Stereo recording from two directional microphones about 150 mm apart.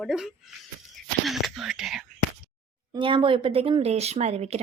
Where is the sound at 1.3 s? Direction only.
Centre (ahead or behind).